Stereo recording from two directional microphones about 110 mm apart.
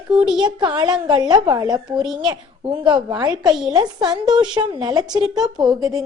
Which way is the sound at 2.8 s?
40° right (ahead or behind).